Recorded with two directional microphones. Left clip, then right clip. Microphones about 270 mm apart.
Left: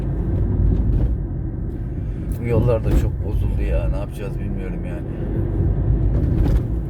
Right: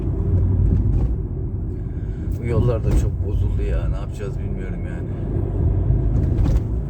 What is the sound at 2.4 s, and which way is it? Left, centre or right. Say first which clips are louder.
Speech: left 3 dB; centre.